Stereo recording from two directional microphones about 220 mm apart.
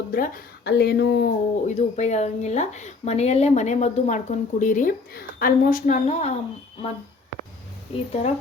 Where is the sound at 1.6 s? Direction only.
30° left (ahead or behind).